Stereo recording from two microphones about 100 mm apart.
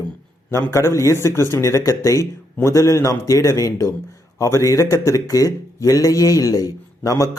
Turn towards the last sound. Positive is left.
turn(degrees=35)  # may be behind; listen again after turning